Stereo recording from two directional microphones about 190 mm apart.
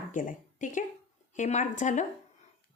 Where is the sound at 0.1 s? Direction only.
45° left (ahead or behind).